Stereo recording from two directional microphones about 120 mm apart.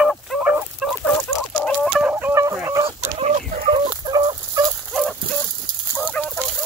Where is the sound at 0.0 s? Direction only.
Centre (ahead or behind).